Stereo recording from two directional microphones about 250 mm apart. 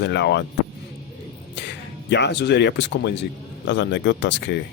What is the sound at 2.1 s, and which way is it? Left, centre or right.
Speech, left.